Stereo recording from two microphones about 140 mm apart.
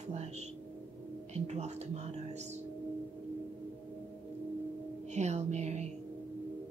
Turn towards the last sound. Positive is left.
turn(degrees=-55)  # may be behind; listen again after turning